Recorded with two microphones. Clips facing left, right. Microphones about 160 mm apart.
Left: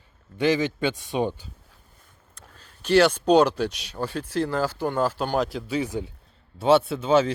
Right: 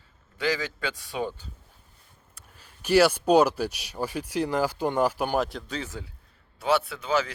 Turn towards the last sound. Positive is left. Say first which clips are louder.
# left 7 dB
turn(degrees=25)  # may be behind; listen again after turning